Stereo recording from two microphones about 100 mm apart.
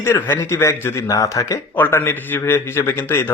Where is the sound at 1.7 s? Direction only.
20° left (ahead or behind).